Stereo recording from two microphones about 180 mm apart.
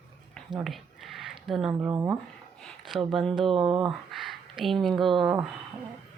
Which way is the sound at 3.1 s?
Centre (ahead or behind).